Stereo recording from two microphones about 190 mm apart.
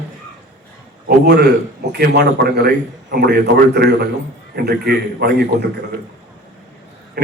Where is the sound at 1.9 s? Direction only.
55° right (ahead or behind).